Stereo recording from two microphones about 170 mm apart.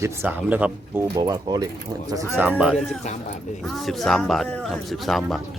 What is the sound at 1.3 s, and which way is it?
Speech, 25° right (ahead or behind).